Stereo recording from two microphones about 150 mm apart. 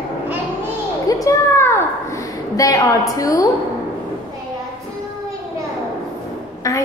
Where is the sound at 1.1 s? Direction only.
20° left (ahead or behind).